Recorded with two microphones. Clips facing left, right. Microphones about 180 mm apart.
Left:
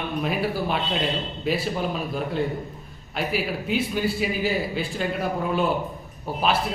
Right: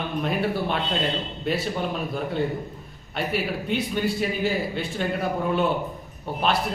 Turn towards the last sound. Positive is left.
turn(degrees=0)  # may be behind; listen again after turning